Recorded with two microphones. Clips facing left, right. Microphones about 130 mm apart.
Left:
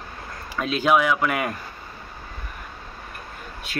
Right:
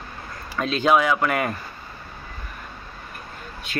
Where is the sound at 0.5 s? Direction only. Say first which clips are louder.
Right 1 dB; 10° left (ahead or behind).